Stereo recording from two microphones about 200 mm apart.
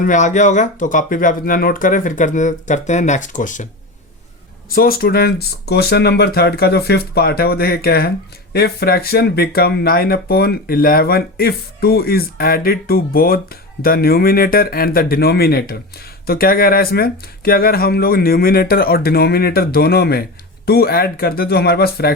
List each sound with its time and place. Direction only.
0.0 s speech: 40° left (ahead or behind)
4.7 s speech: 45° left (ahead or behind)